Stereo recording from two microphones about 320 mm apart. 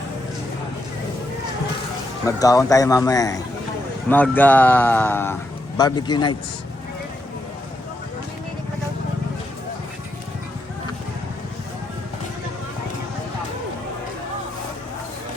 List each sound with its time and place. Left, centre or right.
2.2 s speech: centre